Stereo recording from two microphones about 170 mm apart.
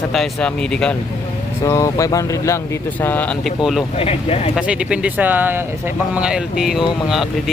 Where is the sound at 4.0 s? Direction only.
35° left (ahead or behind).